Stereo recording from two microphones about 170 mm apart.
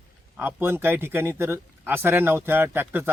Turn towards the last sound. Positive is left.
turn(degrees=-10)  # may be behind; listen again after turning